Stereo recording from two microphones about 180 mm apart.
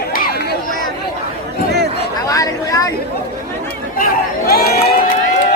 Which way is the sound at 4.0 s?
55° left (ahead or behind).